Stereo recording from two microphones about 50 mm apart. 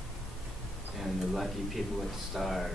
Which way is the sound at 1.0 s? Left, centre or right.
Centre.